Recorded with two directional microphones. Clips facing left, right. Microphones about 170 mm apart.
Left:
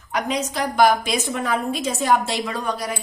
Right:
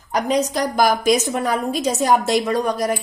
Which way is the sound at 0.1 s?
40° right (ahead or behind).